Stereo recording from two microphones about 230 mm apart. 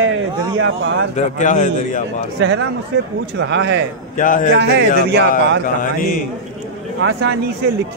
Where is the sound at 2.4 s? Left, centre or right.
Right.